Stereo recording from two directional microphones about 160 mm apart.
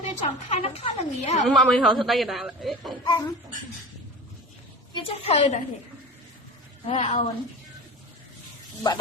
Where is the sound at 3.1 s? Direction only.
20° left (ahead or behind).